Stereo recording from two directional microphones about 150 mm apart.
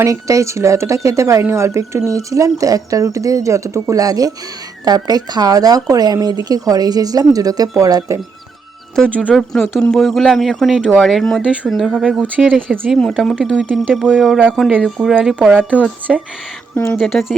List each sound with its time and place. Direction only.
0.0 s speech: 20° right (ahead or behind)
9.0 s speech: 10° left (ahead or behind)
9.9 s speech: centre (ahead or behind)
16.7 s speech: 10° left (ahead or behind)